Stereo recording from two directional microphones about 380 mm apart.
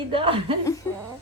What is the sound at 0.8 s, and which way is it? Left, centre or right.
Speech, centre.